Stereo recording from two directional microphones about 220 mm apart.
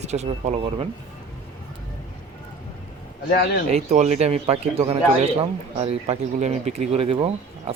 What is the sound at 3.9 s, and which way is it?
Speech, 30° right (ahead or behind).